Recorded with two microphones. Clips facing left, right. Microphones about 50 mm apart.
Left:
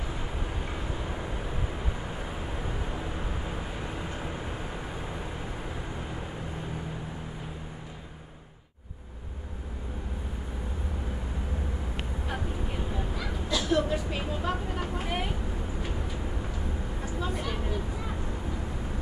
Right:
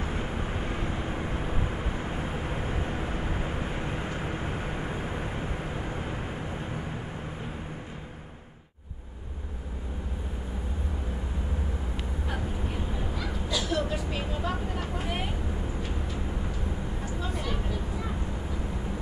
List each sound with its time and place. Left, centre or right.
0.0 s vehicle: right
13.1 s honk: centre
13.6 s vehicle: centre
13.8 s vehicle: centre
17.4 s a sound: centre